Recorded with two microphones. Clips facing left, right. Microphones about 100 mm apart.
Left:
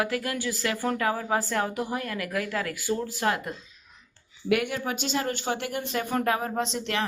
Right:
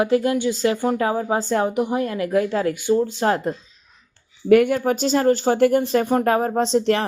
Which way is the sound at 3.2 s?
35° right (ahead or behind).